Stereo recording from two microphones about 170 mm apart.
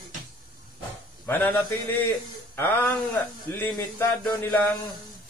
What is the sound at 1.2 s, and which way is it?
A man's voice, 10° left (ahead or behind).